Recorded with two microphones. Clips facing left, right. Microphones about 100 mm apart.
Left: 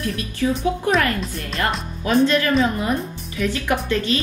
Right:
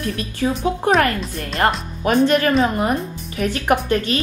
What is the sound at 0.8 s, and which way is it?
A woman's voice, 35° right (ahead or behind).